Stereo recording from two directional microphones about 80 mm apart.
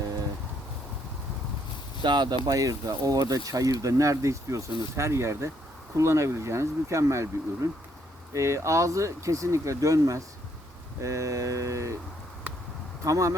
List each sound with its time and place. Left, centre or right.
2.0 s speech: right
2.6 s speech: right
13.1 s speech: right